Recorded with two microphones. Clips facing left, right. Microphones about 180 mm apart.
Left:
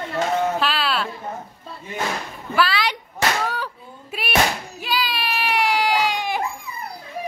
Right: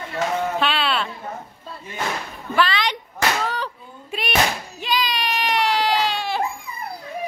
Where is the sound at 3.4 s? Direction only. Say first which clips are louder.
Even; 10° left (ahead or behind).